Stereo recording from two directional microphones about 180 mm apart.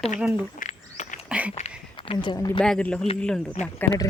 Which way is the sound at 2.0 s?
25° left (ahead or behind).